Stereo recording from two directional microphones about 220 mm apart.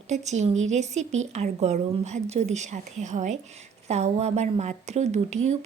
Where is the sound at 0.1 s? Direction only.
30° right (ahead or behind).